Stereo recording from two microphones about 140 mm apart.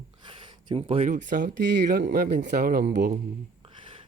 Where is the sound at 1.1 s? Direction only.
65° right (ahead or behind).